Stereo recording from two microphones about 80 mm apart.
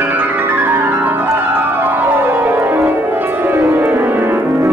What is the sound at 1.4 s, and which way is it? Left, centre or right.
Organ, right.